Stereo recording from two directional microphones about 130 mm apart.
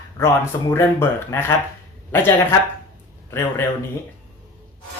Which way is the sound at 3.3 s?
20° left (ahead or behind).